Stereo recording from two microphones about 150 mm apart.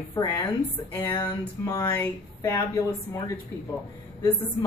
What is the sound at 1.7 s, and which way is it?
Speech, 20° left (ahead or behind).